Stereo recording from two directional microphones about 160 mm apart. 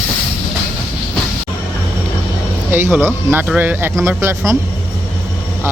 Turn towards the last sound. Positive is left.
turn(degrees=-15)  # may be behind; listen again after turning